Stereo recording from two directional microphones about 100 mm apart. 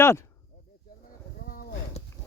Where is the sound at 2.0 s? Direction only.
90° left.